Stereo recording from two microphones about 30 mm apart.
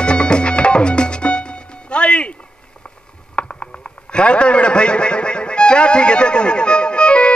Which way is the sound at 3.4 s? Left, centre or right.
Left.